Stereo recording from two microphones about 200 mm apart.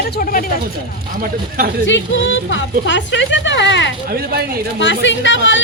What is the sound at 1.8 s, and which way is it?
A woman's voice, 70° left (ahead or behind).